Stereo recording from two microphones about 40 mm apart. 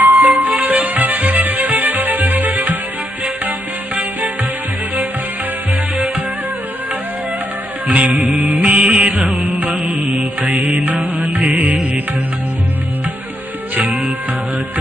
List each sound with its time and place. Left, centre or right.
0.0 s music: right
7.9 s music: right
9.4 s music: right
13.7 s music: right